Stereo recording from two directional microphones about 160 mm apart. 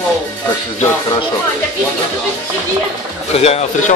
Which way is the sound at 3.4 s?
40° left (ahead or behind).